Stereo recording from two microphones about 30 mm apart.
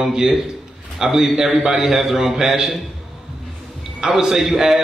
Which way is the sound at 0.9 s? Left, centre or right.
Centre.